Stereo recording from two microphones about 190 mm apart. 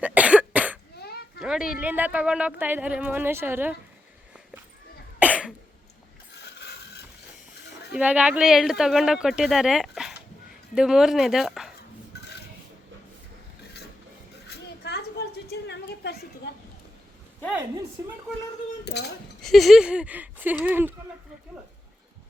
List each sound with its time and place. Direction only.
0.0 s cough: 5° right (ahead or behind)
0.9 s children playing: 55° left (ahead or behind)
1.4 s a sound: 5° right (ahead or behind)
1.8 s speech: 10° right (ahead or behind)
5.2 s cough: 5° right (ahead or behind)
6.3 s mechanisms: 60° left (ahead or behind)
7.9 s speech: 5° right (ahead or behind)
14.4 s a sound: 60° left (ahead or behind)
18.9 s speech: 60° left (ahead or behind)
19.4 s speech: centre (ahead or behind)